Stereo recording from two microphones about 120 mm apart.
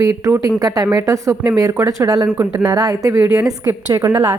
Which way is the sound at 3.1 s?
15° right (ahead or behind).